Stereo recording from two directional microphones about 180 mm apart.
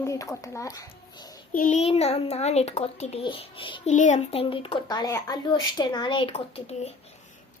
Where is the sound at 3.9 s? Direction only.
40° left (ahead or behind).